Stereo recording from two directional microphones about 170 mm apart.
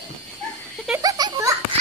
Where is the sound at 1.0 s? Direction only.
20° right (ahead or behind).